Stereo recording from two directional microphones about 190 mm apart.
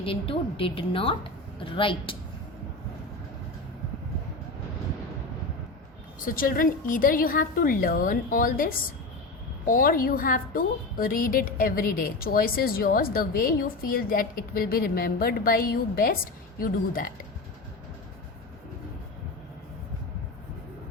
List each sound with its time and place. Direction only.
0.0 s a woman's voice: 30° left (ahead or behind)
6.1 s a woman's voice: 45° left (ahead or behind)